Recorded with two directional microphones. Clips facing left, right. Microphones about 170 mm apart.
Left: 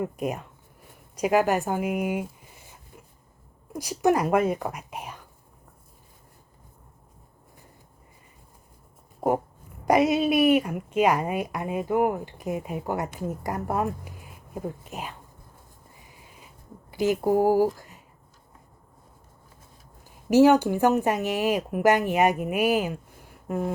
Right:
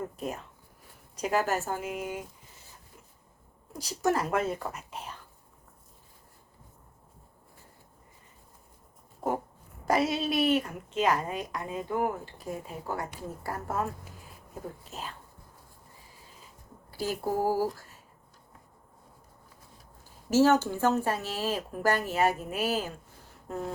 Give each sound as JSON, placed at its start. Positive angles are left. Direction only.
{"t": 0.0, "sound": "a woman's voice", "side_deg": 15}
{"t": 3.7, "sound": "speech", "side_deg": 10}
{"t": 9.8, "sound": "a woman's voice", "side_deg": 15}
{"t": 11.9, "sound": "speech", "side_deg": 60}
{"t": 12.1, "sound": "a woman's voice", "side_deg": 15}
{"t": 16.9, "sound": "speech", "side_deg": 15}
{"t": 20.2, "sound": "a woman's voice", "side_deg": 15}